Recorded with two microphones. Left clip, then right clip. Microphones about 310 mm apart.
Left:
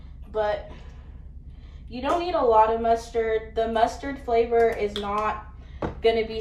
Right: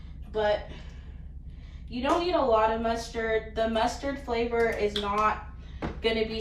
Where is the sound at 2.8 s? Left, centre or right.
Centre.